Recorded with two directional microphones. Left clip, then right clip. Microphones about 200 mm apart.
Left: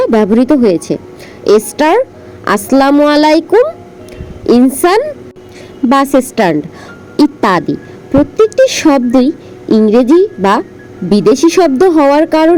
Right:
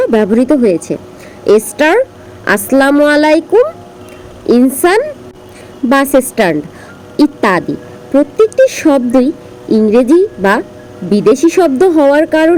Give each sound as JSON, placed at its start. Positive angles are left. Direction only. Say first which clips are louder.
{"t": 0.0, "sound": "a woman's voice", "louder": "left 1 dB", "side_deg": 15}